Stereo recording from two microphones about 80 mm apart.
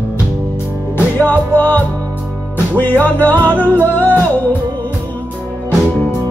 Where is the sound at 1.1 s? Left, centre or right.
Left.